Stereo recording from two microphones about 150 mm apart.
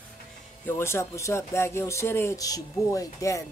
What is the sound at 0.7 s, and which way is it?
Speech, 15° left (ahead or behind).